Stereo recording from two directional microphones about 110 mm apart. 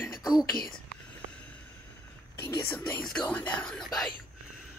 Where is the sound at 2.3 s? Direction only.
20° left (ahead or behind).